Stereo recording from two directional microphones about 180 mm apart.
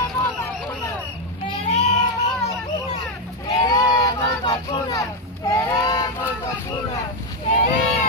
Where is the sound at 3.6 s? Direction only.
20° left (ahead or behind).